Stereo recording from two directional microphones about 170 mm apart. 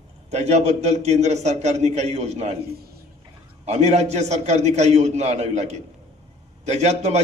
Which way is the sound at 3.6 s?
40° right (ahead or behind).